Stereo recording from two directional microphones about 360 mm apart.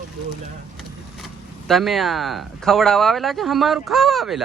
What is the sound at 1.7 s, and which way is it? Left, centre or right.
A man's voice, centre.